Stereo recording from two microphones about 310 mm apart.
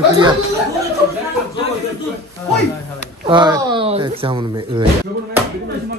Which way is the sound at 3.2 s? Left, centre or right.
Centre.